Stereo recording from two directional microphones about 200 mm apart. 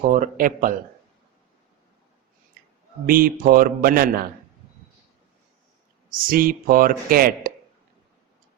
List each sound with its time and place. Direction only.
0.0 s speech: 40° right (ahead or behind)
3.1 s speech: 45° right (ahead or behind)
6.1 s speech: 45° right (ahead or behind)